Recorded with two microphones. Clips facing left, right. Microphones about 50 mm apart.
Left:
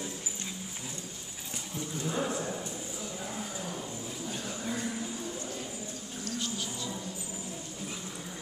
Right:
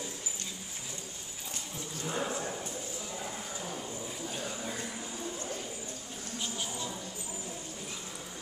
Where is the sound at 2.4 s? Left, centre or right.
Centre.